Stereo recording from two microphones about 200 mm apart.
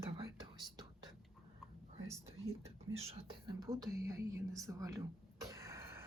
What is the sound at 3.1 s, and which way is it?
Speech, 25° right (ahead or behind).